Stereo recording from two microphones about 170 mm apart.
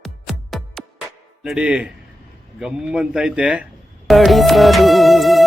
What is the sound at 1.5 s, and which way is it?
Speech, 5° right (ahead or behind).